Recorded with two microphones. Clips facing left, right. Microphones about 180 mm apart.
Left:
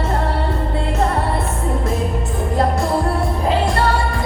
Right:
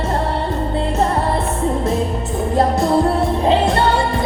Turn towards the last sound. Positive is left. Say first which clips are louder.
# right 2 dB
turn(degrees=-25)  # may be behind; listen again after turning